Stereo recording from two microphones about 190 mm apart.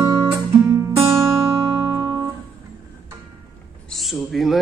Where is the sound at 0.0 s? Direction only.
15° right (ahead or behind).